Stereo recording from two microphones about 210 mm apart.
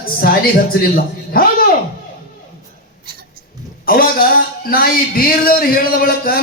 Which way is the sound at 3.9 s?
45° left (ahead or behind).